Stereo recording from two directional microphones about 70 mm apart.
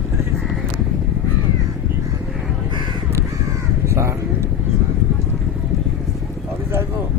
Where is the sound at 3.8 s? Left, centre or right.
Right.